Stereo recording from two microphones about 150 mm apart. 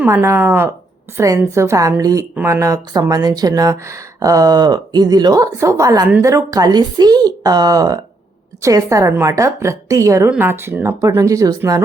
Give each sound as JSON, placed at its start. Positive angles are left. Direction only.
{"t": 0.0, "sound": "speech", "side_deg": -15}